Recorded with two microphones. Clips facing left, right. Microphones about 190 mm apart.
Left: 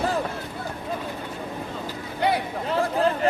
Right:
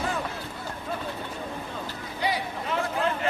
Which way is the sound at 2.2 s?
60° left (ahead or behind).